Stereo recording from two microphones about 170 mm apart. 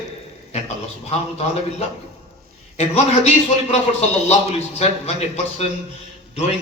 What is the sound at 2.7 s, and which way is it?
A man's voice, 35° left (ahead or behind).